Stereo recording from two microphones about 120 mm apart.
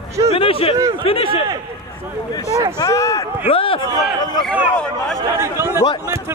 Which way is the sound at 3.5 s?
50° left (ahead or behind).